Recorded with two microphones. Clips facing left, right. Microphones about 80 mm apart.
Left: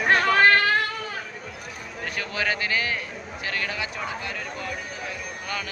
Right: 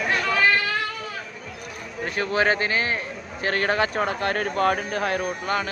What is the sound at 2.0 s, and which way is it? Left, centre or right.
A man's voice, right.